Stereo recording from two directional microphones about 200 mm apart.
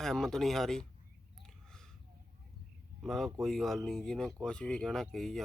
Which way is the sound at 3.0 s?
Centre (ahead or behind).